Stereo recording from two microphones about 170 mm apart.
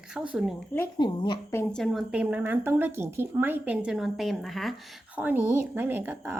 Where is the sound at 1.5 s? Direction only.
15° left (ahead or behind).